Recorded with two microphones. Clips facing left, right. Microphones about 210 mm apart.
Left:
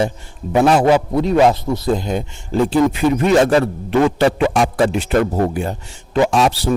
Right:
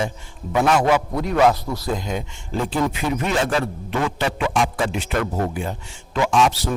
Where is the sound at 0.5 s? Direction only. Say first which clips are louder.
Left 5 dB; 35° left (ahead or behind).